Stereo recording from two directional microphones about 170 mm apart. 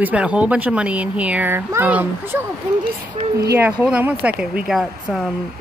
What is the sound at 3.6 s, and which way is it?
Speech, 10° right (ahead or behind).